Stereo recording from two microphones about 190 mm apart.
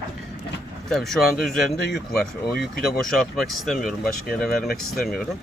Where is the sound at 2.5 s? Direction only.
55° left (ahead or behind).